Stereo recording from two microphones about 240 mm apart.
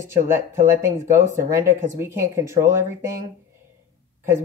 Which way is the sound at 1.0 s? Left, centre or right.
Right.